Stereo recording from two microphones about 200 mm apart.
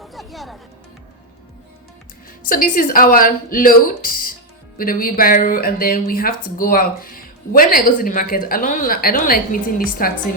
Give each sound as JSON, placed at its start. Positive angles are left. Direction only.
{"t": 0.0, "sound": "music", "side_deg": 0}
{"t": 2.5, "sound": "speech", "side_deg": 45}